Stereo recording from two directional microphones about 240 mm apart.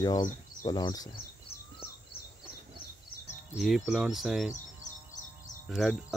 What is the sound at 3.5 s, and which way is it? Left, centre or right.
Cricket, centre.